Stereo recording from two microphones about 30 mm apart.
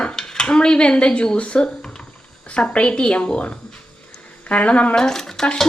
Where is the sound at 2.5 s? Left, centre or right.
Left.